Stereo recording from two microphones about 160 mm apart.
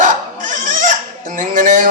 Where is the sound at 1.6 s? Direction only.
55° right (ahead or behind).